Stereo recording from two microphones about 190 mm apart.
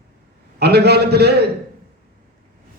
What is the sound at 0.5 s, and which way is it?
Speech, 60° right (ahead or behind).